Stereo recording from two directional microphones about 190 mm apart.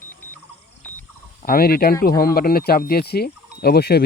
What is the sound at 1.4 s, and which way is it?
Speech, 50° left (ahead or behind).